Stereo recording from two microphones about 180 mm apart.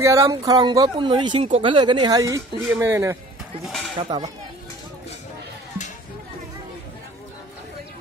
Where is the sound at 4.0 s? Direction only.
25° right (ahead or behind).